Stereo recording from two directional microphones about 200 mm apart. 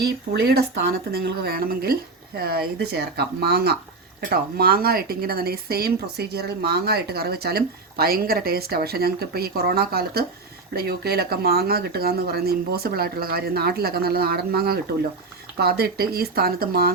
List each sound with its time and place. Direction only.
0.0 s a woman's voice: 55° right (ahead or behind)